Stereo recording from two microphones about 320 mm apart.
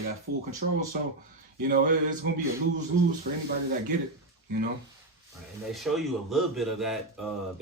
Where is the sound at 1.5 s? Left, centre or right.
Right.